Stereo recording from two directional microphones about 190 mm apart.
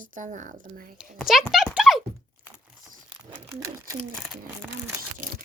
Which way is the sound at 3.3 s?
15° right (ahead or behind).